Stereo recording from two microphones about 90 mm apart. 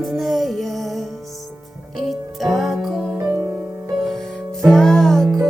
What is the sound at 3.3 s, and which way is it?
Music, 35° right (ahead or behind).